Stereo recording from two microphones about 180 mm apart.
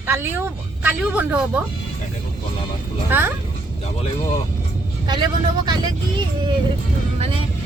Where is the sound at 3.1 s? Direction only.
10° right (ahead or behind).